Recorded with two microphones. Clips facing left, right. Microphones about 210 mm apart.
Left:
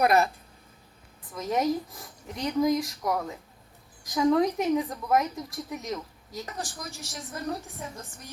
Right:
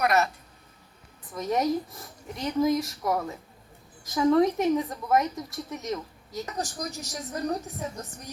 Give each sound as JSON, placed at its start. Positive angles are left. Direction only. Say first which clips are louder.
{"t": 1.3, "sound": "speech", "louder": "right 1 dB", "side_deg": 0}
{"t": 6.6, "sound": "a woman's voice", "louder": "right 5 dB", "side_deg": -40}